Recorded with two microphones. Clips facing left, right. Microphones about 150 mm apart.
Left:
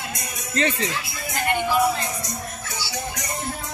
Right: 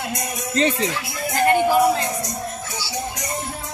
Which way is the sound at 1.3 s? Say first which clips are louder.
Right 6 dB; 45° right (ahead or behind).